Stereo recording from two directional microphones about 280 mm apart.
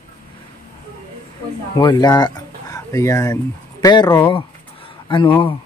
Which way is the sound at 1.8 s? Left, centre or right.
Centre.